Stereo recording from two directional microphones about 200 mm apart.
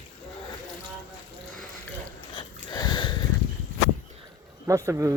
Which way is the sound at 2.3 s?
20° left (ahead or behind).